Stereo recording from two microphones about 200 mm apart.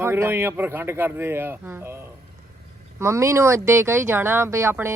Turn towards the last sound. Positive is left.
turn(degrees=-10)  # may be behind; listen again after turning